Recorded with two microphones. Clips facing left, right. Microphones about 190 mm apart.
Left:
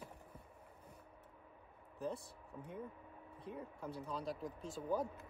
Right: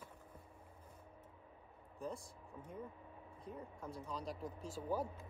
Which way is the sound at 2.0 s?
65° left (ahead or behind).